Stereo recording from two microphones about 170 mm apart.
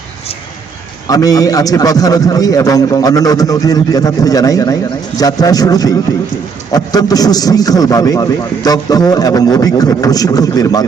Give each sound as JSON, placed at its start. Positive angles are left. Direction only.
{"t": 1.0, "sound": "a man's voice", "side_deg": 20}